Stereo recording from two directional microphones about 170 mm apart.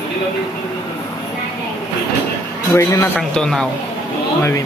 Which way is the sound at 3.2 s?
5° left (ahead or behind).